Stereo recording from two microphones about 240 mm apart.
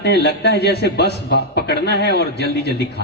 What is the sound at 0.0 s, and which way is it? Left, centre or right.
A man's voice, left.